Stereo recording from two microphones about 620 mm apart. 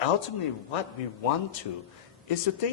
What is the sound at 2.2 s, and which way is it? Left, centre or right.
Speech, left.